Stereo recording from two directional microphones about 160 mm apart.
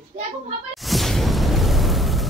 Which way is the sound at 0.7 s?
Centre (ahead or behind).